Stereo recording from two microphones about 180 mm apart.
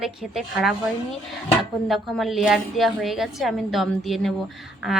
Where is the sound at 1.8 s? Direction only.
Centre (ahead or behind).